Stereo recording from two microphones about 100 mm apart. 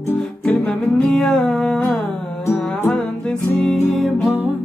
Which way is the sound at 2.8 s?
5° left (ahead or behind).